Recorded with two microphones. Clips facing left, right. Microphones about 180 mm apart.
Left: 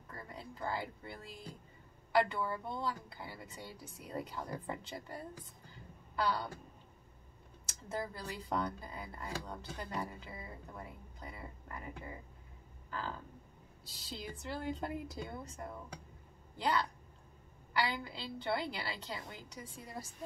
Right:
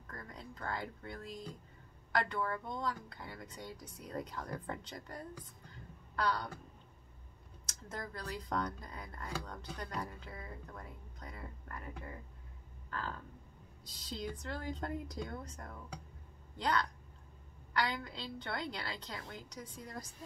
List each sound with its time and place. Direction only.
0.1 s music: 10° left (ahead or behind)
2.1 s speech: 5° left (ahead or behind)
7.6 s speech: 5° left (ahead or behind)
13.8 s a woman's voice: 5° left (ahead or behind)